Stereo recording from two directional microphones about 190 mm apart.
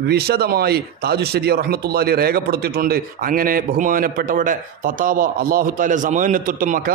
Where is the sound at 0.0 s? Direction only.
55° right (ahead or behind).